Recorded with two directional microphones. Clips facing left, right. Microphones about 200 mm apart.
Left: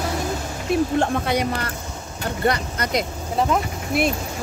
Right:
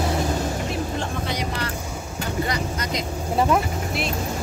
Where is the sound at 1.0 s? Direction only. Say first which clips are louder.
Left 6 dB; 55° left (ahead or behind).